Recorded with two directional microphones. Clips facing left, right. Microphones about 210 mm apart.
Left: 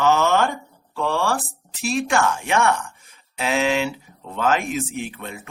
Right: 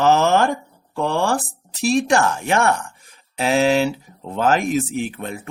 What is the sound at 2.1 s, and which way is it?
Speech, 35° right (ahead or behind).